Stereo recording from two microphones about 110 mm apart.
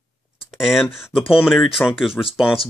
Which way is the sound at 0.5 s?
5° right (ahead or behind).